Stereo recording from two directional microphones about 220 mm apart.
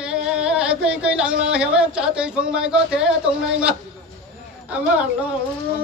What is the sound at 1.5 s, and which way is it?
Music, 5° right (ahead or behind).